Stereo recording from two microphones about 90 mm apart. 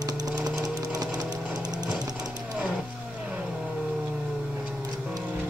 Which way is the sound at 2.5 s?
Centre (ahead or behind).